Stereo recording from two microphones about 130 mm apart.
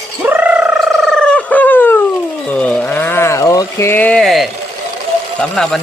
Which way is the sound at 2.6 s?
10° left (ahead or behind).